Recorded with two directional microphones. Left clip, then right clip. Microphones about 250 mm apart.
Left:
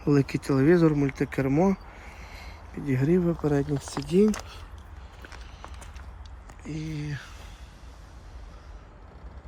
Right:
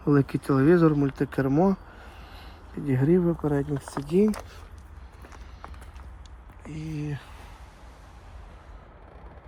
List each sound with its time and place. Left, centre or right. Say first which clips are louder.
0.0 s speech: right 1 dB; centre
2.2 s a sound: left 2 dB; right
2.7 s speech: right 2 dB; centre
6.7 s speech: even; centre